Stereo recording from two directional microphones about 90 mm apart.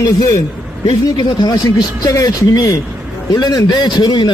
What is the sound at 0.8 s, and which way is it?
Speech, 65° left (ahead or behind).